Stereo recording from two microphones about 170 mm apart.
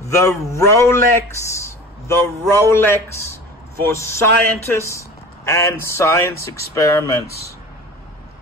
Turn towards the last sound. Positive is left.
turn(degrees=70)  # may be behind; listen again after turning